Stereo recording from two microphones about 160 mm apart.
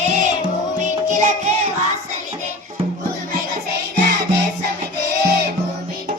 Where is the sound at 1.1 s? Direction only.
50° right (ahead or behind).